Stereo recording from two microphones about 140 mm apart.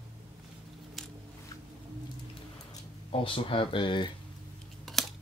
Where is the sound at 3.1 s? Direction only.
40° left (ahead or behind).